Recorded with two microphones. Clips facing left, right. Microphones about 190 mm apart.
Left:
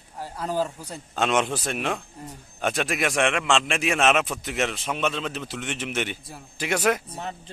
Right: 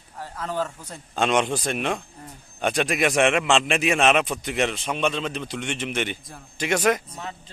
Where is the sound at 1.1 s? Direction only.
Centre (ahead or behind).